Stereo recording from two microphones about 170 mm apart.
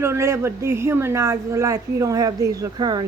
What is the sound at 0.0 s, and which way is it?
Speech, 15° right (ahead or behind).